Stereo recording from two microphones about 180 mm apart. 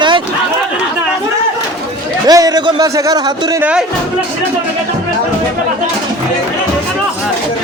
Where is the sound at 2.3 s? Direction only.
20° right (ahead or behind).